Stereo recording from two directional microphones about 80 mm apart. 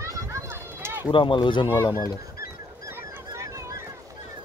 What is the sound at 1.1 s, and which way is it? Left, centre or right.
Speech, left.